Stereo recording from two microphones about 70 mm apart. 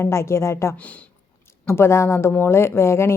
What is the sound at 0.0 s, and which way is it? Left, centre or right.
A woman's voice, left.